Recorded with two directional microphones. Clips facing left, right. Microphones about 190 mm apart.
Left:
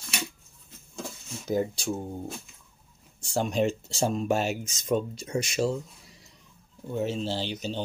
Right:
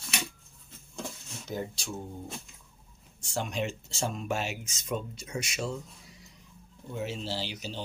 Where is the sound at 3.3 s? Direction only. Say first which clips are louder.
Left 7 dB; 40° left (ahead or behind).